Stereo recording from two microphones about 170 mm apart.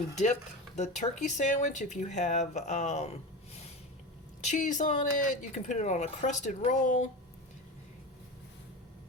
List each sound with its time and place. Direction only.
0.8 s speech: 45° left (ahead or behind)